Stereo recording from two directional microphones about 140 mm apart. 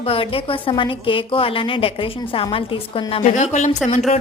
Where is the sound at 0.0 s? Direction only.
40° left (ahead or behind).